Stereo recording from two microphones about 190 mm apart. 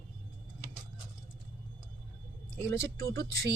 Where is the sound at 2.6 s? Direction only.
15° left (ahead or behind).